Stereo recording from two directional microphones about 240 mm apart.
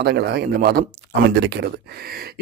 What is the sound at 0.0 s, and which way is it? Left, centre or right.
Speech, right.